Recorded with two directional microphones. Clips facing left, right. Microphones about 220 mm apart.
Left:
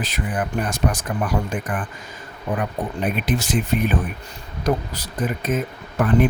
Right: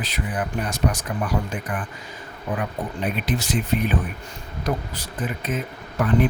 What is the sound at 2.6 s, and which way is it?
Speech, 50° left (ahead or behind).